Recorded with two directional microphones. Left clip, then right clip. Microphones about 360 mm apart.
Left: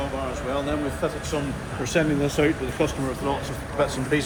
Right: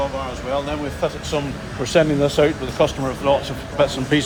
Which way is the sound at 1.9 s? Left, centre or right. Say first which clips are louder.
Right 7 dB; right.